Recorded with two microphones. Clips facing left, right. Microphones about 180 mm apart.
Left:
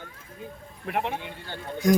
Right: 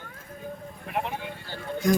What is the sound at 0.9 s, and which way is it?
Speech, 65° left (ahead or behind).